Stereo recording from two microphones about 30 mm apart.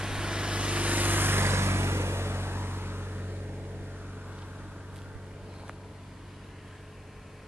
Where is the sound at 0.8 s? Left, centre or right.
Right.